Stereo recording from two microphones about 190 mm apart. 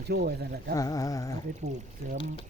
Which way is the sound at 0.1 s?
55° right (ahead or behind).